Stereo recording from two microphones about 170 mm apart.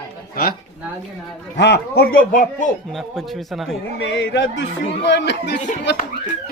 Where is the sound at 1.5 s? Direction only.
90° left; by 2.7 s 50° left (ahead or behind).